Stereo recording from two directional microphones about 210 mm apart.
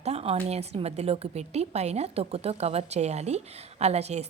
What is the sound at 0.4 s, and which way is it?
A woman's voice, 30° right (ahead or behind).